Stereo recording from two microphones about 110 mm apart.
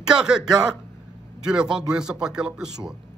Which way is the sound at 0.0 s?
5° right (ahead or behind).